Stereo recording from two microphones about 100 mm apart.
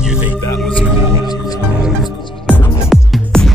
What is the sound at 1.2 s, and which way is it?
Music, 40° left (ahead or behind).